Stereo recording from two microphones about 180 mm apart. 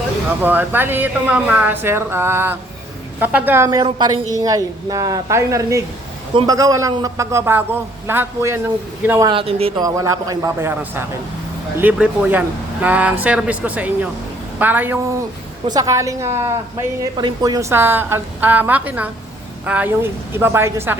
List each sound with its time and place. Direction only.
0.4 s a woman's voice: 10° right (ahead or behind)
9.3 s a man's voice: 30° right (ahead or behind)
9.8 s a woman's voice: 20° right (ahead or behind)
15.6 s a woman's voice: 20° right (ahead or behind)